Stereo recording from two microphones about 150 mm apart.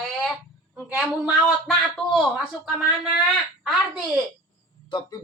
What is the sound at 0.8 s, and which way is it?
A woman's voice, 5° right (ahead or behind).